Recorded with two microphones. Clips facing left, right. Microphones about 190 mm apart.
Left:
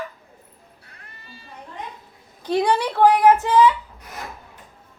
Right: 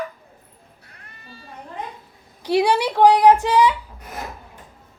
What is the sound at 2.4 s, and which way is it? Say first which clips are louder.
Speech: right 2 dB; 10° right (ahead or behind).